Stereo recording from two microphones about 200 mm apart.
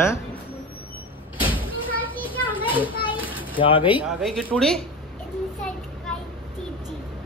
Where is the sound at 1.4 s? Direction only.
25° left (ahead or behind).